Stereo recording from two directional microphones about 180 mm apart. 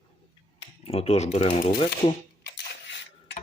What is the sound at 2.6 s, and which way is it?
Dishes, 80° left.